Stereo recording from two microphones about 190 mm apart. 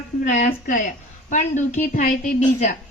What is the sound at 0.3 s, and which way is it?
A woman's voice, 40° left (ahead or behind).